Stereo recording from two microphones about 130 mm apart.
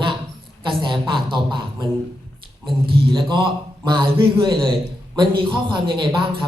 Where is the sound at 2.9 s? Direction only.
40° right (ahead or behind).